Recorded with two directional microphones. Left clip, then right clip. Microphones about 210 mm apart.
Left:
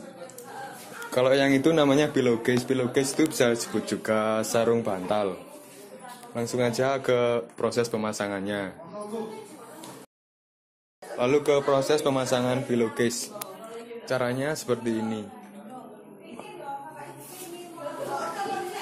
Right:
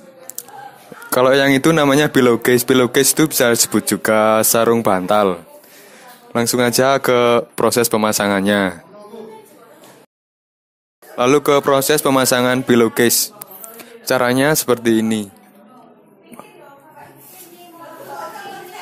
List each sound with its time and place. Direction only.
1.1 s speech: 45° right (ahead or behind)
11.1 s speech: 50° right (ahead or behind)